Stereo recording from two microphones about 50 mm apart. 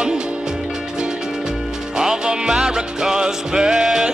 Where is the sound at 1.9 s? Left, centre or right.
Centre.